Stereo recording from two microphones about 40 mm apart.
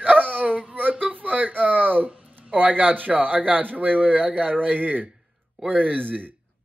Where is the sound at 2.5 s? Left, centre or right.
Right.